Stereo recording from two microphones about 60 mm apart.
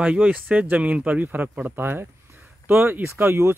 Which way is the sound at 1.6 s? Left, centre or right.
Right.